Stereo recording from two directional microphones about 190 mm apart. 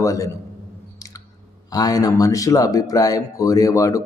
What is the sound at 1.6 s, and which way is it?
A man's voice, 20° left (ahead or behind).